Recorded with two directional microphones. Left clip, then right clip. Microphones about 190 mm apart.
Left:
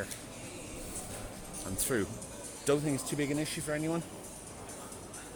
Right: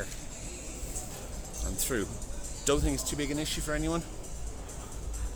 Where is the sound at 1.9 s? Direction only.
10° right (ahead or behind).